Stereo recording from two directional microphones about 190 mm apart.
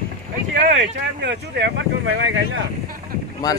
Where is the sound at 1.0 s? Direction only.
65° right (ahead or behind).